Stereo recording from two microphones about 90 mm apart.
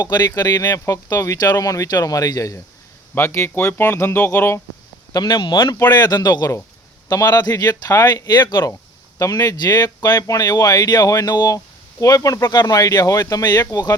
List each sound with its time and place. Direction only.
0.0 s speech: 50° left (ahead or behind)
0.6 s speech: 30° left (ahead or behind)
3.2 s speech: 25° left (ahead or behind)
5.1 s speech: 55° left (ahead or behind)
5.9 s speech: 50° left (ahead or behind)
9.1 s speech: 40° left (ahead or behind)